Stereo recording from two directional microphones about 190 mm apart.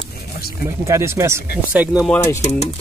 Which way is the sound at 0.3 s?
55° left (ahead or behind).